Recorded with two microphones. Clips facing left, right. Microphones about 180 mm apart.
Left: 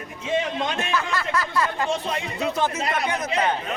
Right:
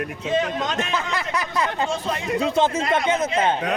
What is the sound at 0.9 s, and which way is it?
A man's voice, 20° right (ahead or behind).